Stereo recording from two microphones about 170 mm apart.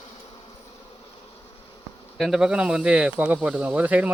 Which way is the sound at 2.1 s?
Centre (ahead or behind).